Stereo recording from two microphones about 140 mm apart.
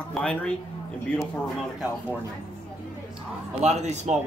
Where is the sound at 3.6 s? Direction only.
55° right (ahead or behind).